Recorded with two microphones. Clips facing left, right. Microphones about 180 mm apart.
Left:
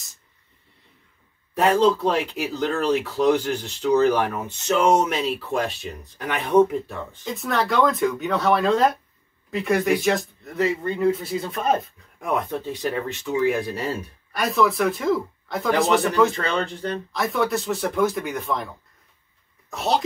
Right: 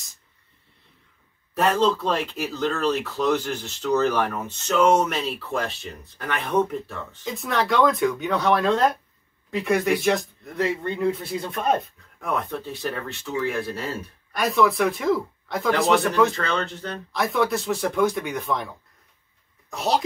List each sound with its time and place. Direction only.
1.6 s speech: 15° left (ahead or behind)
7.2 s speech: centre (ahead or behind)
12.2 s speech: 15° left (ahead or behind)
14.3 s speech: centre (ahead or behind)
16.3 s speech: 15° left (ahead or behind)
17.1 s speech: centre (ahead or behind)
19.7 s speech: centre (ahead or behind)